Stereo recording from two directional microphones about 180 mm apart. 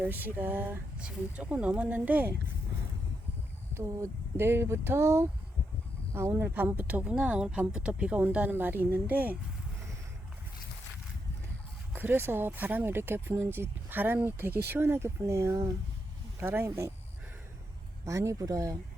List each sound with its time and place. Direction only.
0.0 s speech: 10° right (ahead or behind)
3.8 s speech: 15° right (ahead or behind)
11.9 s speech: 10° right (ahead or behind)
18.0 s speech: 15° right (ahead or behind)